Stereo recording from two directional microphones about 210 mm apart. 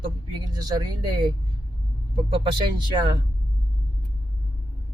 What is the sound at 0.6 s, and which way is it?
Speech, 20° right (ahead or behind).